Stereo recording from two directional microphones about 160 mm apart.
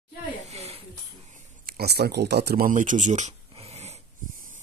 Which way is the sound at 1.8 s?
80° right.